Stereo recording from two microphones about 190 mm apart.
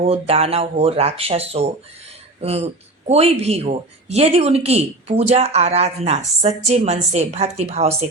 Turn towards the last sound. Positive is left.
turn(degrees=-35)  # may be behind; listen again after turning